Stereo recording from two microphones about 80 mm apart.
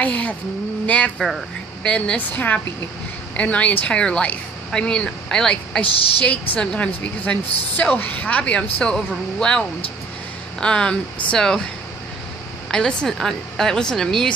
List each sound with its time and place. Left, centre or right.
0.0 s a woman's voice: centre
12.7 s a woman's voice: centre